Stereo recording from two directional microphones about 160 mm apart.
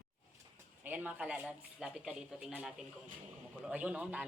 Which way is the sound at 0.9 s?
10° right (ahead or behind).